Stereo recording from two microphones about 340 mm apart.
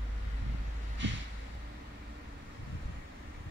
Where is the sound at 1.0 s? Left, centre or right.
Right.